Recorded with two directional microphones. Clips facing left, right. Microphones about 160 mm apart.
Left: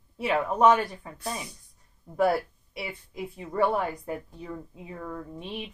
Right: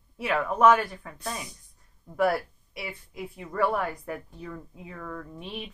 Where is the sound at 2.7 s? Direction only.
25° left (ahead or behind).